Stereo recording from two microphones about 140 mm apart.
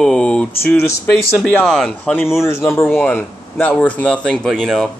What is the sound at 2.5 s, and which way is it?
Speech, 20° left (ahead or behind).